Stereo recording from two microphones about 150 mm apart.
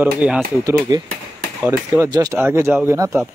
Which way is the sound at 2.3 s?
15° right (ahead or behind).